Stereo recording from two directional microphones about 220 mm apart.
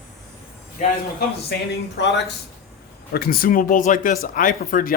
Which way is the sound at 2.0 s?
50° left (ahead or behind).